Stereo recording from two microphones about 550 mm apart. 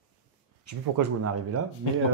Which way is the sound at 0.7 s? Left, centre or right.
Right.